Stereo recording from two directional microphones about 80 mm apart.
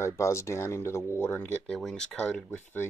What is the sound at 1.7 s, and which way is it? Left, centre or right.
Speech, centre.